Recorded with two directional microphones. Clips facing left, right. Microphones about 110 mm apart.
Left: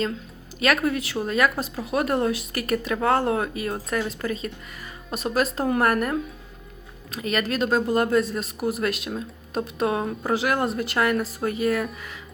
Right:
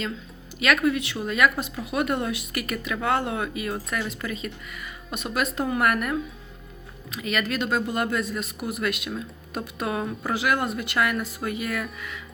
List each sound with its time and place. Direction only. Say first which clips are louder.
0.6 s speech: even; 35° left (ahead or behind)